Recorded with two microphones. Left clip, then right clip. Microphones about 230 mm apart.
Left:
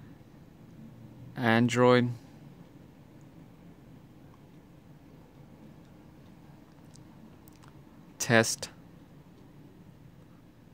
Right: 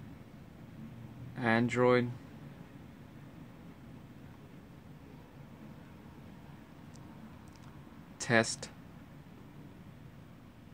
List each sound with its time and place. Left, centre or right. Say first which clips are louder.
1.3 s speech: left 4 dB; left
8.2 s speech: left 4 dB; left